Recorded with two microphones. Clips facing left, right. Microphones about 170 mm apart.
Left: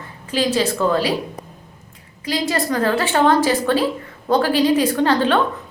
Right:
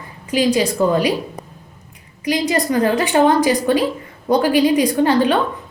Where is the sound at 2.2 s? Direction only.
15° right (ahead or behind).